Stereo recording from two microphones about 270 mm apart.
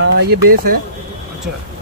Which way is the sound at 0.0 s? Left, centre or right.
Right.